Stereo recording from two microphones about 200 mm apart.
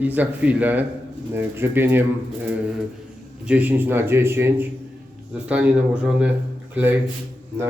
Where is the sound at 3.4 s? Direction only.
10° right (ahead or behind).